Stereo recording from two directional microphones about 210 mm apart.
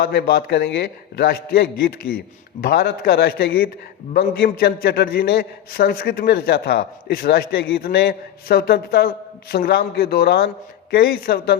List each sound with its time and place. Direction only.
0.0 s a man's voice: 50° left (ahead or behind)